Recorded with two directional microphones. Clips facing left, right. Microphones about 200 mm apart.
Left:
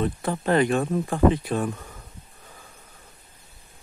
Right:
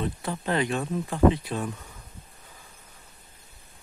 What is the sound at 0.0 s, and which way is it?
Speech, 50° left (ahead or behind).